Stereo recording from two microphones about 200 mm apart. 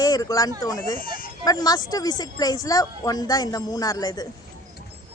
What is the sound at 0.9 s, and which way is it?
Speech, 45° left (ahead or behind).